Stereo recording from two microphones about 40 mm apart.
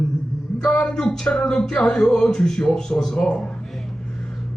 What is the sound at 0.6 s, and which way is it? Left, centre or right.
A man's voice, left.